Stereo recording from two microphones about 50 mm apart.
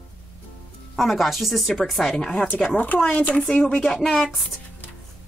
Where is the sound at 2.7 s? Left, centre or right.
Left.